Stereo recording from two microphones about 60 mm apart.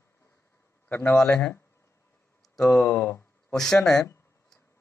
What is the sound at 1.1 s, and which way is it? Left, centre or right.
Speech, centre.